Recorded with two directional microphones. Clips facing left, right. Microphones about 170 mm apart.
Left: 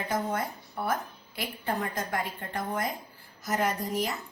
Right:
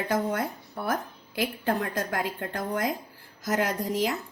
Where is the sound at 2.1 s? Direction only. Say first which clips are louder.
Right 2 dB; 90° right.